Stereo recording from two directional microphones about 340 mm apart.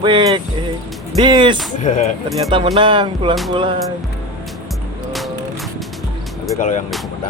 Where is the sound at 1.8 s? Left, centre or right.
Left.